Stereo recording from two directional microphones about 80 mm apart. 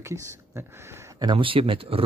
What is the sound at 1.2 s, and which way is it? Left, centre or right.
Speech, right.